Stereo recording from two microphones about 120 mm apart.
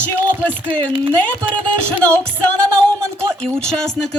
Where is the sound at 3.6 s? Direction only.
5° left (ahead or behind).